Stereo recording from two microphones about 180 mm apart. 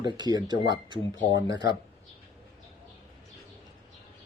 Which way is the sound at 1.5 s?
75° left (ahead or behind).